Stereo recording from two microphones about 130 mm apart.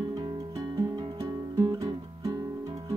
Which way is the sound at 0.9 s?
35° right (ahead or behind).